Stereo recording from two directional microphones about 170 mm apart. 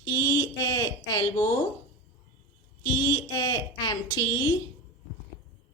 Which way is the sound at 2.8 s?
25° left (ahead or behind).